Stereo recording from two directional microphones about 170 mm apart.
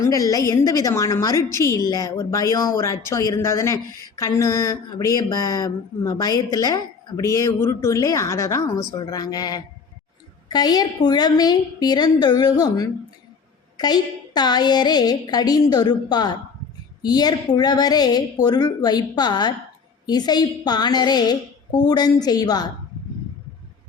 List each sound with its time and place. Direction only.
0.0 s speech: 20° left (ahead or behind)